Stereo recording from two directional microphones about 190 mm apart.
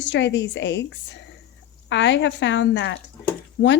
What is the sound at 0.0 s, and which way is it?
Speech, 70° left (ahead or behind).